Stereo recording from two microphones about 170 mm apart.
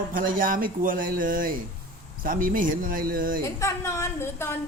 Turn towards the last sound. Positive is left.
turn(degrees=15)  # may be behind; listen again after turning